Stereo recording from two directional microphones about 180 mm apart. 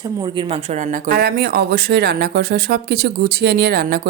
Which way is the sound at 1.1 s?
60° right (ahead or behind).